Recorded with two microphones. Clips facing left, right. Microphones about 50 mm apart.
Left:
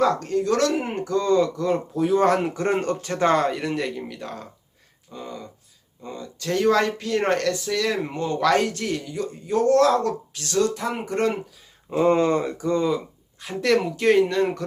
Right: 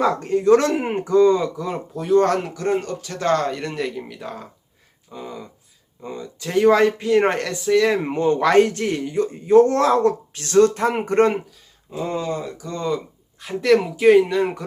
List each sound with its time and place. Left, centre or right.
0.0 s speech: right; by 2.5 s centre
2.6 s speech: left
3.2 s speech: centre; by 11.3 s right
11.9 s speech: left
13.4 s speech: centre